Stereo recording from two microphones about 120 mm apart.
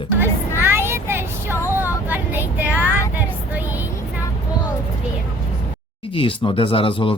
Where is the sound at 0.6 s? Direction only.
20° right (ahead or behind).